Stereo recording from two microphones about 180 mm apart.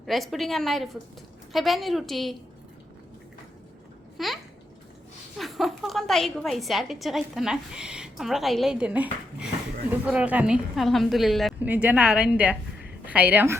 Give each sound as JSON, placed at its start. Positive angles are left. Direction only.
{"t": 0.0, "sound": "a woman's voice", "side_deg": 0}
{"t": 4.2, "sound": "a woman's voice", "side_deg": 0}
{"t": 5.4, "sound": "a woman's voice", "side_deg": 0}